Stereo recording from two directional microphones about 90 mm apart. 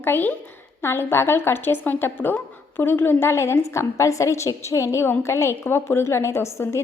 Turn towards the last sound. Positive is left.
turn(degrees=30)  # may be behind; listen again after turning